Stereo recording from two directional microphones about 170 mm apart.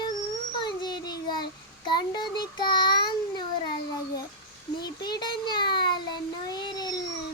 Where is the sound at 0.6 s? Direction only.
25° left (ahead or behind).